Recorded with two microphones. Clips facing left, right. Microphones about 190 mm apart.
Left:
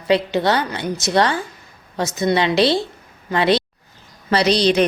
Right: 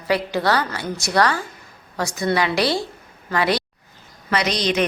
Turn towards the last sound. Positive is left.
turn(degrees=30)  # may be behind; listen again after turning